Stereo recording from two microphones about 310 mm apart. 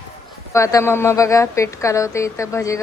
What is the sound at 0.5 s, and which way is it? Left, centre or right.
A woman's voice, centre.